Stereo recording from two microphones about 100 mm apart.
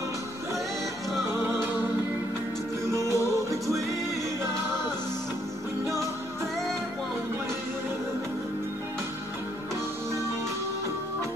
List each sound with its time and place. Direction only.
1.3 s music: 25° right (ahead or behind)
2.9 s music: 30° right (ahead or behind)